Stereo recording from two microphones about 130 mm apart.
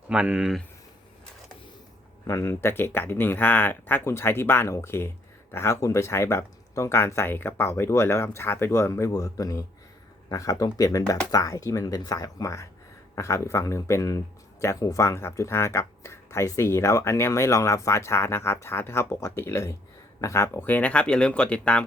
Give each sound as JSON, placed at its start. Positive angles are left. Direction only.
{"t": 0.1, "sound": "speech", "side_deg": -5}
{"t": 2.2, "sound": "speech", "side_deg": 25}